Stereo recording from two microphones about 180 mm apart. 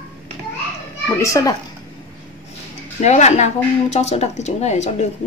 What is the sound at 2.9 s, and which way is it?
Speech, 40° left (ahead or behind).